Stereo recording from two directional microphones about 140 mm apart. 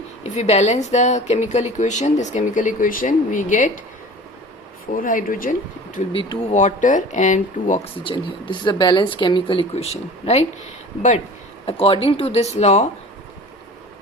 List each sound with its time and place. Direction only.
0.2 s speech: 50° left (ahead or behind)
4.9 s speech: 75° left (ahead or behind)
6.1 s speech: 35° left (ahead or behind)
6.5 s speech: 60° left (ahead or behind)
8.0 s speech: 35° left (ahead or behind)
9.7 s speech: 50° left (ahead or behind)
11.6 s speech: 40° left (ahead or behind)